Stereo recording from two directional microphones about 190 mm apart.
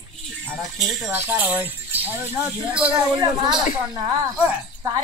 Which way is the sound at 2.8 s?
25° right (ahead or behind).